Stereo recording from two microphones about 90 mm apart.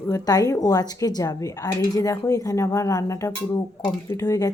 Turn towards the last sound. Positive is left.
turn(degrees=40)  # may be behind; listen again after turning